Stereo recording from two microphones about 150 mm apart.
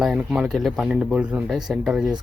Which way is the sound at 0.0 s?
5° right (ahead or behind).